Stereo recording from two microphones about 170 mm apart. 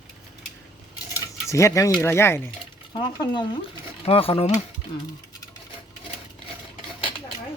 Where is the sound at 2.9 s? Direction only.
25° left (ahead or behind).